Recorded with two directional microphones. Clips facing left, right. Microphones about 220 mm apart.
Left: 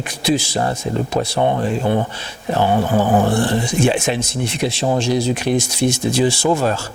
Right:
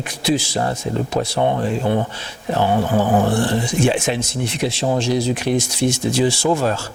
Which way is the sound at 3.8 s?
10° left (ahead or behind).